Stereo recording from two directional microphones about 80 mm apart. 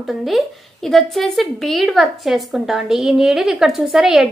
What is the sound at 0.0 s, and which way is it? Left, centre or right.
A woman's voice, centre.